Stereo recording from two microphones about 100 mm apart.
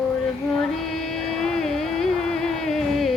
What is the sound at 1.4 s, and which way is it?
Music, 5° left (ahead or behind).